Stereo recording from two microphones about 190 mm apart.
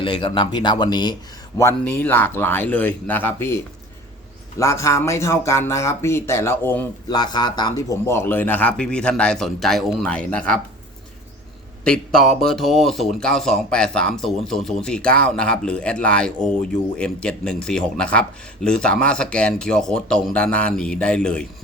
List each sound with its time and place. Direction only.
0.0 s speech: 25° left (ahead or behind)
1.5 s speech: 10° left (ahead or behind)
7.1 s speech: 20° left (ahead or behind); by 10.6 s 5° left (ahead or behind)
11.9 s speech: centre (ahead or behind)